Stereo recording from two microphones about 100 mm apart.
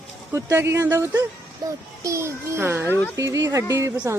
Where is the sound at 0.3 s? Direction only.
25° right (ahead or behind).